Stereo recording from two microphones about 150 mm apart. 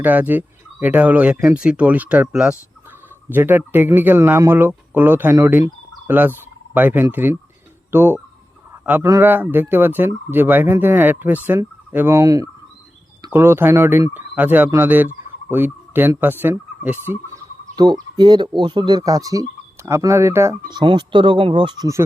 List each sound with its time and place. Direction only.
0.0 s speech: 10° right (ahead or behind)
17.7 s speech: 25° right (ahead or behind)
20.7 s speech: 30° right (ahead or behind)